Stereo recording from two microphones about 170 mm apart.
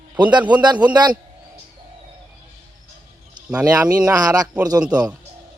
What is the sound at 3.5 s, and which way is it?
Speech, 5° right (ahead or behind).